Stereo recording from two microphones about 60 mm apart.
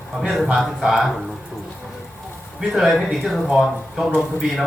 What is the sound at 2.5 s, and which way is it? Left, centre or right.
A man's voice, centre.